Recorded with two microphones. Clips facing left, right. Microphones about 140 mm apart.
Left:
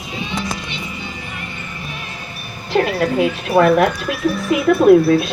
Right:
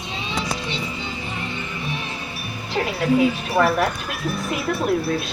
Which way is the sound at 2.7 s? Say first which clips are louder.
Left 3 dB; 65° left (ahead or behind).